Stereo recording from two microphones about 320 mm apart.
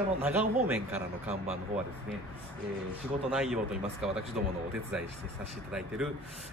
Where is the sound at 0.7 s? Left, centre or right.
Centre.